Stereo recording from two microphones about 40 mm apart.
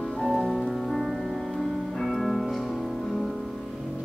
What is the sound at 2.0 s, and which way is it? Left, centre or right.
Music, centre.